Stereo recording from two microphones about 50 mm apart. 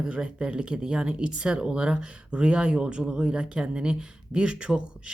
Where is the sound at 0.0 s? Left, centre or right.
Right.